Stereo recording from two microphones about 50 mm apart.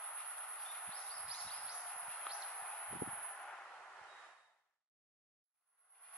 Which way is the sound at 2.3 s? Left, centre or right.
Centre.